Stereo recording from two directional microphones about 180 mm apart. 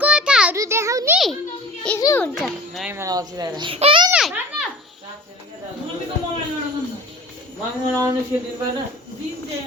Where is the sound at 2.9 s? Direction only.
15° right (ahead or behind).